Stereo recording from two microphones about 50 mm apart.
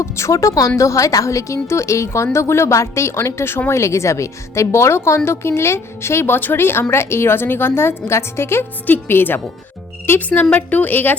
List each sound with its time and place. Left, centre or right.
0.0 s a woman's voice: left
3.7 s a woman's voice: left
8.9 s a woman's voice: left
10.2 s a woman's voice: left